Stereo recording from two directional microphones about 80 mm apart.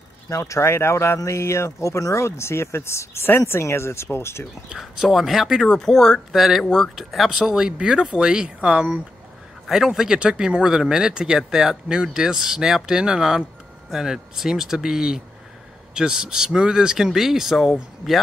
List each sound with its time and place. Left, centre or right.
0.3 s speech: left
4.6 s speech: centre